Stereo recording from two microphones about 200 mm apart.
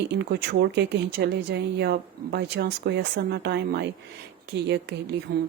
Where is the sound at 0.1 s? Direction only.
55° right (ahead or behind).